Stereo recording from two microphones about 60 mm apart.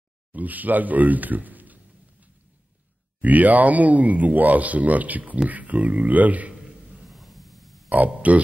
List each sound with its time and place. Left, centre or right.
0.3 s speech: right
3.2 s speech: right
6.5 s grunt: centre
8.2 s speech: right